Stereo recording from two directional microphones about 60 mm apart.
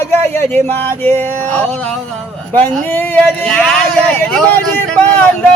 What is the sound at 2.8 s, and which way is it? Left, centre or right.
Speech, left.